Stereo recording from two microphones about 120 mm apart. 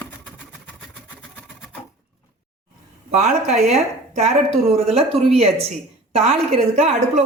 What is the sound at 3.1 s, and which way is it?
Speech, 70° right (ahead or behind).